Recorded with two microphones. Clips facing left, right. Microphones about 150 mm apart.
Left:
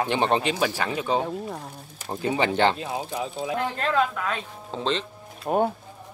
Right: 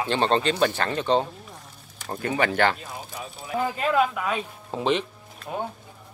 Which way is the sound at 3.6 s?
10° right (ahead or behind).